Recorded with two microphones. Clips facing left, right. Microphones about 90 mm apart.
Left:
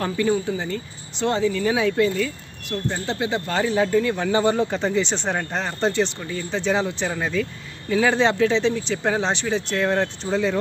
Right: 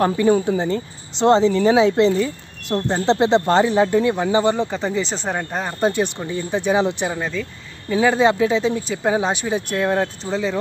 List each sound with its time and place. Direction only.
0.6 s speech: 30° right (ahead or behind)
3.5 s speech: 20° right (ahead or behind)
4.3 s speech: centre (ahead or behind)
7.2 s speech: centre (ahead or behind)